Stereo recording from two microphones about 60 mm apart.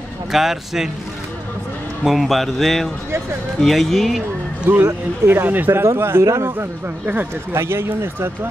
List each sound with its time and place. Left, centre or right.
0.3 s speech: centre
2.0 s speech: centre
4.6 s speech: right
5.7 s speech: right